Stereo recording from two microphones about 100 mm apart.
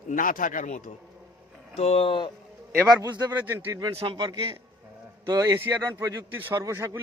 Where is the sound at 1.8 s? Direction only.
85° left; by 2.3 s 60° left (ahead or behind).